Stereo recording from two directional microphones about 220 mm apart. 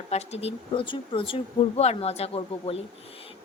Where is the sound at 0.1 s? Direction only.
30° left (ahead or behind).